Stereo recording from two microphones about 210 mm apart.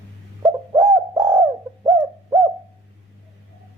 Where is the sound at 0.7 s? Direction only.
15° right (ahead or behind).